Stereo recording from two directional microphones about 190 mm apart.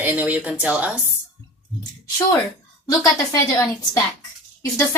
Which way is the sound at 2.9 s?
15° left (ahead or behind).